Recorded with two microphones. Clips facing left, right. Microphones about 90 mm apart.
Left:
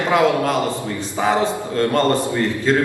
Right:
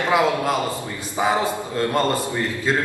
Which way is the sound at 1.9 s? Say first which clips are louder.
Left 4 dB; 10° right (ahead or behind).